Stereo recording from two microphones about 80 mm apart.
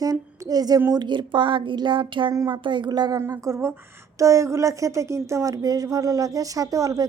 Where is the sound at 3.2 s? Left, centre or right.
Right.